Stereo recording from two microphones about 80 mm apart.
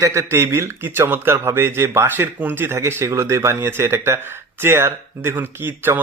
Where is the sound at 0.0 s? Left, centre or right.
Right.